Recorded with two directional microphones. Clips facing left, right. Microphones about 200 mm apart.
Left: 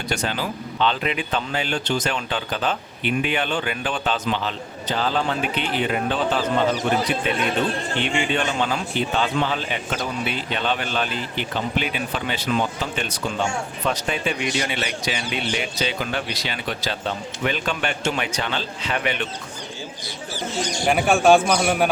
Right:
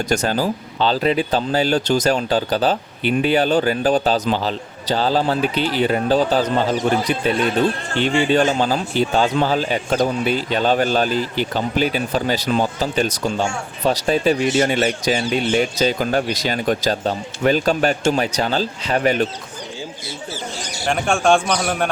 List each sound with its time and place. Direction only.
0.1 s speech: 40° right (ahead or behind)
20.8 s a man's voice: 5° left (ahead or behind)